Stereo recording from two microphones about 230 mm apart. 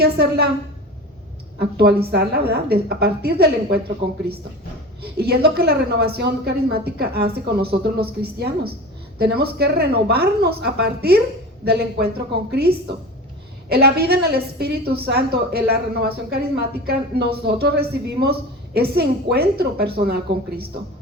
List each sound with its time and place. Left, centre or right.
0.0 s a woman's voice: right
1.5 s a woman's voice: right
5.1 s a woman's voice: right